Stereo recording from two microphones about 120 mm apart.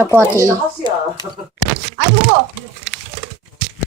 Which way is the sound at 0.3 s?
25° right (ahead or behind).